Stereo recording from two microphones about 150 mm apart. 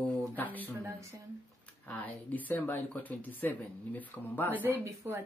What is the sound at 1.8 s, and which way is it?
Speech, 10° left (ahead or behind).